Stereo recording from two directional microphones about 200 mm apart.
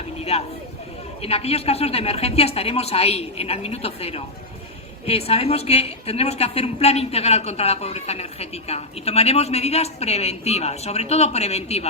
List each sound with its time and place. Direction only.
0.3 s a woman's voice: 30° left (ahead or behind)